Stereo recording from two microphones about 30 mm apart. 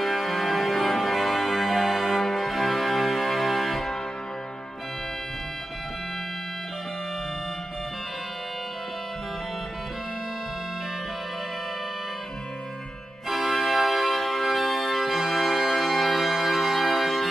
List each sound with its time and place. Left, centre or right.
0.0 s music: centre
13.3 s organ: centre